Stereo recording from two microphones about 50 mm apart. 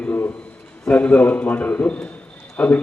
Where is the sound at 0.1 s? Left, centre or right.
Left.